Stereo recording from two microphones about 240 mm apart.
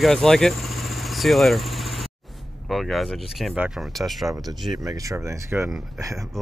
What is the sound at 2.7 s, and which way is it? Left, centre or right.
Speech, centre.